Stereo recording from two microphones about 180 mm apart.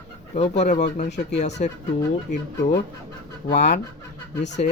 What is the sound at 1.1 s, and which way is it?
Speech, 75° left (ahead or behind).